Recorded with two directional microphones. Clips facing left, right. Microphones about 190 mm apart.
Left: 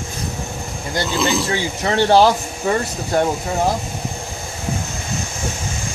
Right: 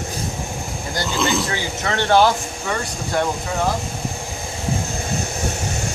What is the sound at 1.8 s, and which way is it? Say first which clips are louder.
Speech: left 3 dB; 25° left (ahead or behind).